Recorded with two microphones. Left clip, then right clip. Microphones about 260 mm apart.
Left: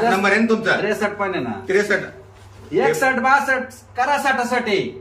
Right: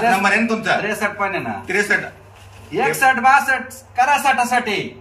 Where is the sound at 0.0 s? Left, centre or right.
Centre.